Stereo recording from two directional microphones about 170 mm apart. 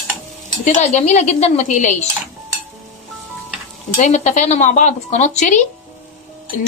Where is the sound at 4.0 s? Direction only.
45° left (ahead or behind).